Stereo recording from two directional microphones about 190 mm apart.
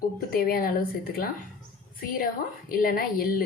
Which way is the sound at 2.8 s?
50° left (ahead or behind).